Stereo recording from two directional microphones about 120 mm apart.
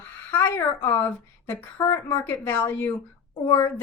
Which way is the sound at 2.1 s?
15° left (ahead or behind).